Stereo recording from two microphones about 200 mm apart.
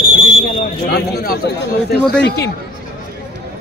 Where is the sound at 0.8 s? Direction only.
50° left (ahead or behind).